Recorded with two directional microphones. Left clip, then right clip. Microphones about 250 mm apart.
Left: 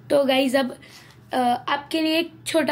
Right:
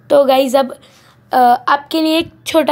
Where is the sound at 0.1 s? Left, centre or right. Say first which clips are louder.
Right 9 dB; right.